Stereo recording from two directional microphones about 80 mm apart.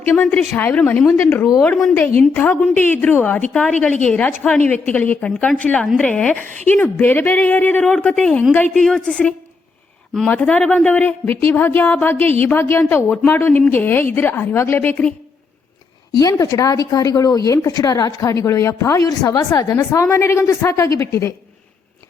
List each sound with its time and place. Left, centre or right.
0.0 s a woman's voice: left
1.6 s speech: centre
1.9 s a woman's voice: left
6.7 s a woman's voice: left
16.1 s a woman's voice: left